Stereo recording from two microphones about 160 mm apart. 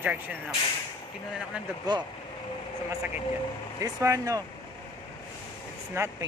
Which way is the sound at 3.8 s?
20° right (ahead or behind).